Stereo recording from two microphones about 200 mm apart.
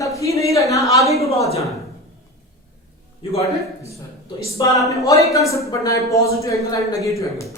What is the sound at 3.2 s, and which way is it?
Speech, 25° left (ahead or behind).